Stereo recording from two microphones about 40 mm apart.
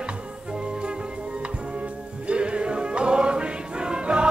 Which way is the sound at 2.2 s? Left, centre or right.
Right.